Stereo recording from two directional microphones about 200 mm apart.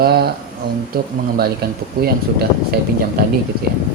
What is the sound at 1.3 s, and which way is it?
Speech, 50° right (ahead or behind).